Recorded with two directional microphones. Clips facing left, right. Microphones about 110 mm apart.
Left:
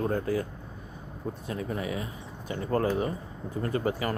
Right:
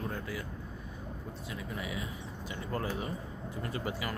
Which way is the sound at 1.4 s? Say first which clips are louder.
Left 7 dB; 45° left (ahead or behind).